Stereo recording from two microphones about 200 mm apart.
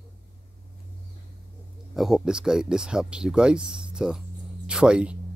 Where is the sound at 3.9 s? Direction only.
5° right (ahead or behind).